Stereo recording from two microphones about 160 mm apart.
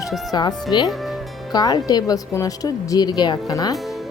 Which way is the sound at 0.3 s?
25° left (ahead or behind).